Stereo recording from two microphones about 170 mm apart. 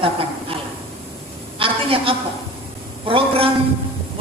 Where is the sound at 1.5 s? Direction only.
30° right (ahead or behind).